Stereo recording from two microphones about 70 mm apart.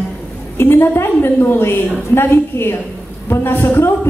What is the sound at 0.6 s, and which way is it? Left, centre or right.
A woman's voice, left.